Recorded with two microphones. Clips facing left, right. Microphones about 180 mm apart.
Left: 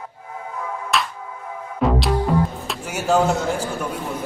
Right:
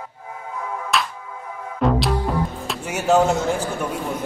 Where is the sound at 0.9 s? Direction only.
Centre (ahead or behind).